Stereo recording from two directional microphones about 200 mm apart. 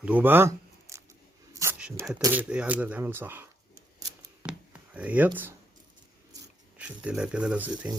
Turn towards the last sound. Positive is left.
turn(degrees=-5)  # may be behind; listen again after turning